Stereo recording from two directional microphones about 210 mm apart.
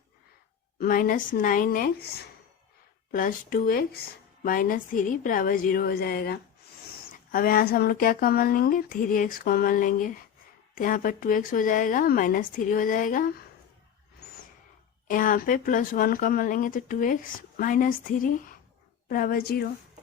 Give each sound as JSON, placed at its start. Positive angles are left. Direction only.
{"t": 0.8, "sound": "speech", "side_deg": 40}
{"t": 15.0, "sound": "speech", "side_deg": 40}